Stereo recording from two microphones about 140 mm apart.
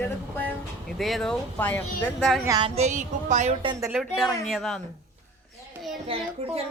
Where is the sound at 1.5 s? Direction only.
10° left (ahead or behind).